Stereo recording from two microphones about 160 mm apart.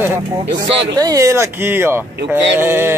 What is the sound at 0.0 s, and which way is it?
Speech, 15° right (ahead or behind).